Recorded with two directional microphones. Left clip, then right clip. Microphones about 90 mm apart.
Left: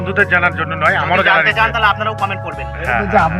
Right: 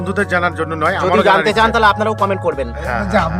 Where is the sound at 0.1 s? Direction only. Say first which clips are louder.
Left 3 dB; 80° right.